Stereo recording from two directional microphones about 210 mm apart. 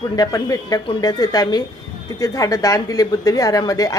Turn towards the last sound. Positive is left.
turn(degrees=15)  # may be behind; listen again after turning